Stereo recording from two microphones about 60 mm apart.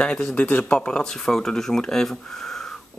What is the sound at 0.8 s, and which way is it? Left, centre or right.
Speech, centre.